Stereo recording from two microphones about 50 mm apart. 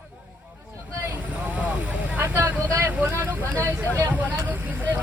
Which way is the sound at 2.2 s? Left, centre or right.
Right.